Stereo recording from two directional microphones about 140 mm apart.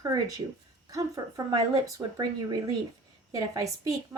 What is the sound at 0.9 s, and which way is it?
Speech, 25° right (ahead or behind).